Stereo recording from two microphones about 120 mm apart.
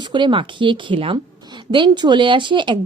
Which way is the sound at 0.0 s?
40° right (ahead or behind).